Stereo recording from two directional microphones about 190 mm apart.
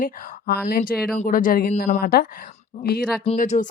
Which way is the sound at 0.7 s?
50° left (ahead or behind).